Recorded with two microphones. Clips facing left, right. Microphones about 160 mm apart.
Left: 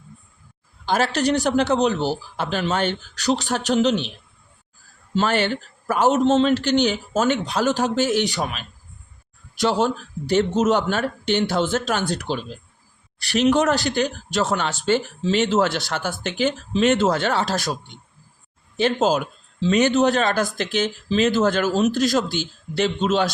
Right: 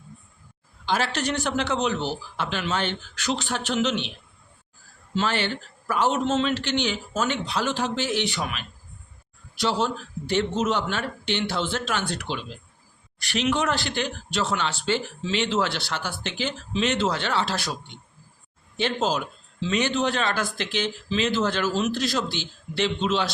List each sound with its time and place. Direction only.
0.9 s a man's voice: 45° left (ahead or behind)
5.1 s a man's voice: 45° left (ahead or behind)
9.6 s speech: 50° left (ahead or behind)
18.8 s speech: 45° left (ahead or behind)